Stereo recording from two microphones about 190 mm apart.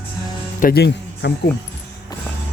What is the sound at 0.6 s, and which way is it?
Speech, 60° left (ahead or behind).